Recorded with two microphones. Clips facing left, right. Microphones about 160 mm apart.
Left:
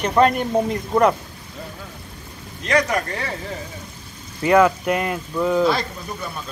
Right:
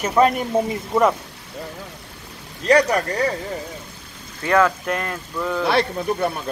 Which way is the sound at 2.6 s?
35° right (ahead or behind).